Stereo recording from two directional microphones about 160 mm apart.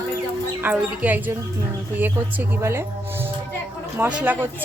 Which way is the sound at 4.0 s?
10° right (ahead or behind).